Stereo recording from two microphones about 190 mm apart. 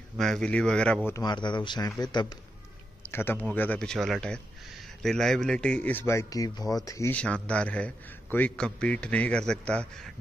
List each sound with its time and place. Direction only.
0.2 s speech: 5° left (ahead or behind)
1.1 s speech: 20° left (ahead or behind)
3.1 s speech: 10° left (ahead or behind)